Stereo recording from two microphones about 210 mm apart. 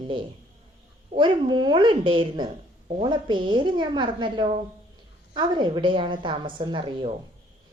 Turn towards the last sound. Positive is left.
turn(degrees=-25)  # may be behind; listen again after turning